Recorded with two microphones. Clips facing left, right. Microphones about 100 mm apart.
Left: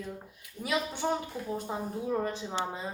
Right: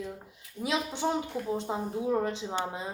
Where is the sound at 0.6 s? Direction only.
20° right (ahead or behind).